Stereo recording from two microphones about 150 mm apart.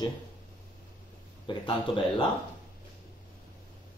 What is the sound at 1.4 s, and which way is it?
Speech, 30° left (ahead or behind).